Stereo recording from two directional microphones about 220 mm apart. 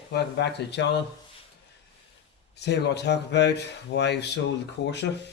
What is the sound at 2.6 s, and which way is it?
Speech, 50° left (ahead or behind).